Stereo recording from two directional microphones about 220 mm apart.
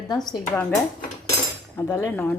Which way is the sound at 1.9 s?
10° left (ahead or behind).